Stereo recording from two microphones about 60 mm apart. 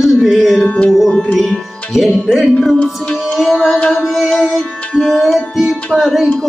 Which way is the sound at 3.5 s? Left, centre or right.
Centre.